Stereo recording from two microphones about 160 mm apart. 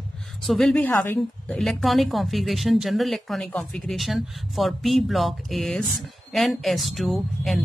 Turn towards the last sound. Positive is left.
turn(degrees=0)  # may be behind; listen again after turning